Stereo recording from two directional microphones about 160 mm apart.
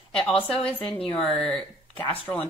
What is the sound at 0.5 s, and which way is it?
Speech, 10° left (ahead or behind).